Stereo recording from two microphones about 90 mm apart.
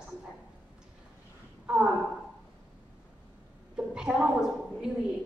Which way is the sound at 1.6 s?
15° right (ahead or behind).